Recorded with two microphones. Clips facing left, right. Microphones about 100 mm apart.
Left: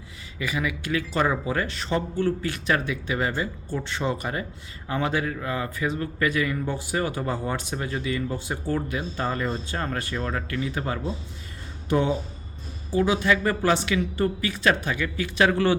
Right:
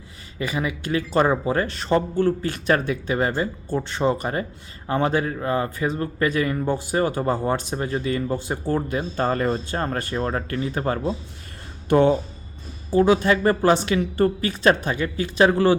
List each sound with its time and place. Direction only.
0.3 s speech: 35° right (ahead or behind); by 9.6 s 50° right (ahead or behind)
9.7 s speech: 35° right (ahead or behind)
11.9 s speech: 65° right (ahead or behind)
13.0 s speech: 40° right (ahead or behind)